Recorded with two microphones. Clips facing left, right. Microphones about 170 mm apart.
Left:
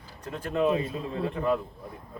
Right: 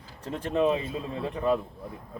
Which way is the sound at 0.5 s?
20° right (ahead or behind).